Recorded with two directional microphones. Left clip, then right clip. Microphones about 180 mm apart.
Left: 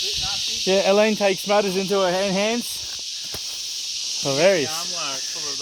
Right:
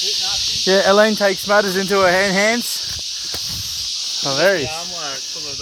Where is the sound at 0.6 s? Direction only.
10° left (ahead or behind).